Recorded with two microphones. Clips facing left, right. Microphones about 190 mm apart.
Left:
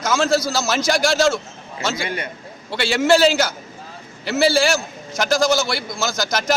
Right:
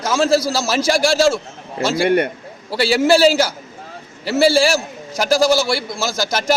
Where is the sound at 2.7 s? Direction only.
35° right (ahead or behind).